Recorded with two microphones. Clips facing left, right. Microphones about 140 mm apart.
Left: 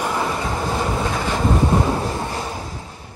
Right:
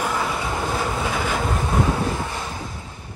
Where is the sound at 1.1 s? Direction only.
5° right (ahead or behind).